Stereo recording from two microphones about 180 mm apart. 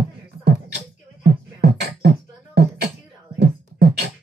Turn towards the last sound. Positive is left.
turn(degrees=-65)  # may be behind; listen again after turning